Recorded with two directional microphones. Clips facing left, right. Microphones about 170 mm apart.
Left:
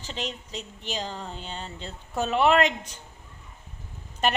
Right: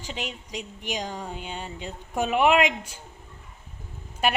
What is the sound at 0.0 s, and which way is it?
A woman's voice, 10° right (ahead or behind).